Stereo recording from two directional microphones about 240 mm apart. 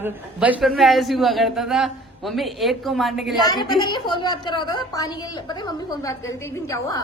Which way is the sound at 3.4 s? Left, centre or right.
Centre.